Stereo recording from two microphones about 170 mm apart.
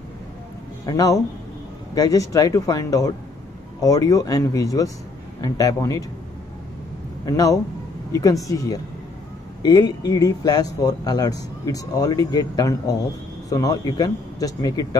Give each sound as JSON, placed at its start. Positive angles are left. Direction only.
{"t": 0.8, "sound": "speech", "side_deg": 20}
{"t": 7.2, "sound": "speech", "side_deg": 20}